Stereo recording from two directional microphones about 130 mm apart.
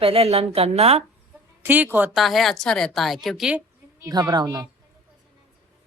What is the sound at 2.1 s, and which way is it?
Speech, centre (ahead or behind).